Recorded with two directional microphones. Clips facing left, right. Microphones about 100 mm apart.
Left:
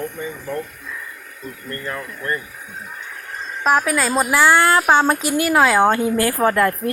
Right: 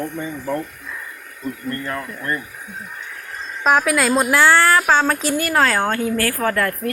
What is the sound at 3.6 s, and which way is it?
Speech, centre (ahead or behind).